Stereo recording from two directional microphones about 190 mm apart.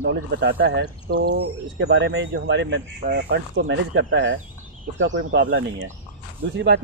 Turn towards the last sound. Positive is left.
turn(degrees=-65)  # may be behind; listen again after turning